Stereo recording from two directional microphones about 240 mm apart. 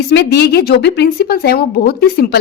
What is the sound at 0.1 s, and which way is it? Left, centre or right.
A woman's voice, left.